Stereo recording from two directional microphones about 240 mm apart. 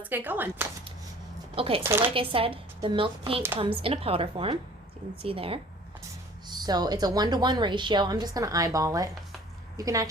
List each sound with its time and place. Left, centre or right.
0.0 s a woman's voice: centre
1.5 s a woman's voice: right
1.8 s a woman's voice: centre
2.1 s a woman's voice: right